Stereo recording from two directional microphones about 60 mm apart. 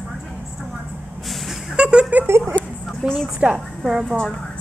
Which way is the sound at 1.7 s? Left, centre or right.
Centre.